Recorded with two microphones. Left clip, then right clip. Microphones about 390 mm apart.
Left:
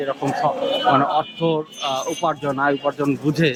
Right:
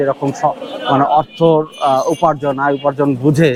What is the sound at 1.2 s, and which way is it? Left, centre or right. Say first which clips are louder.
Speech: right 9 dB; right.